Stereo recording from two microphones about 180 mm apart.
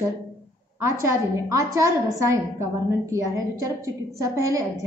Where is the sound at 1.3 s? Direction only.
15° right (ahead or behind).